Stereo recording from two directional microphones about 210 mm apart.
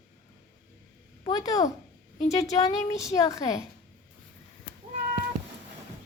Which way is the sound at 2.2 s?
30° left (ahead or behind).